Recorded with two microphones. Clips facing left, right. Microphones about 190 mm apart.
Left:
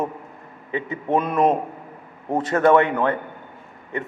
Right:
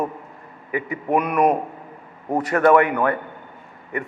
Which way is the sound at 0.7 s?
25° left (ahead or behind).